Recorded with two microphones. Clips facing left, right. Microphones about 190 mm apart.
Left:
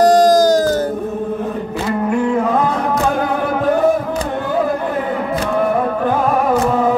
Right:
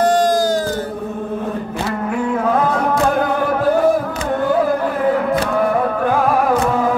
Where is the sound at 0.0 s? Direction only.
40° left (ahead or behind).